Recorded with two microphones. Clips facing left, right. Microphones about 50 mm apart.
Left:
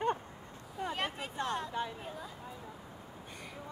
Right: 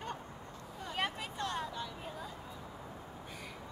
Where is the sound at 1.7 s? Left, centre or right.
Left.